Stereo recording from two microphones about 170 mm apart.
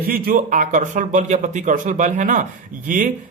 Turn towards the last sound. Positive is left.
turn(degrees=-50)  # may be behind; listen again after turning